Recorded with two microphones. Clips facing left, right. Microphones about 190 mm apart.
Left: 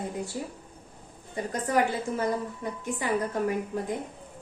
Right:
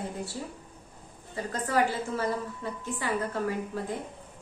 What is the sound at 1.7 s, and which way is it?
A woman's voice, 15° left (ahead or behind).